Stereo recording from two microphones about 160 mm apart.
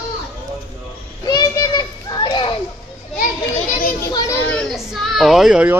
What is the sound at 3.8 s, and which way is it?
Children playing, 60° left (ahead or behind).